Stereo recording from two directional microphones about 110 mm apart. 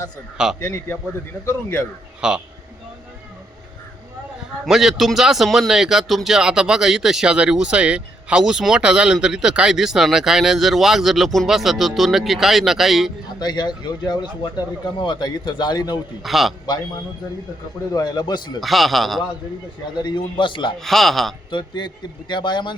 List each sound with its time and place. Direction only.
0.6 s speech: 25° left (ahead or behind)
2.2 s a man's voice: 10° right (ahead or behind)
4.6 s a man's voice: 5° right (ahead or behind)
13.4 s a man's voice: 40° left (ahead or behind)
16.2 s a man's voice: centre (ahead or behind)
17.9 s a man's voice: 40° left (ahead or behind)
18.6 s a man's voice: centre (ahead or behind)
20.0 s a man's voice: 45° left (ahead or behind)
20.7 s a man's voice: centre (ahead or behind)
21.8 s a man's voice: 45° left (ahead or behind)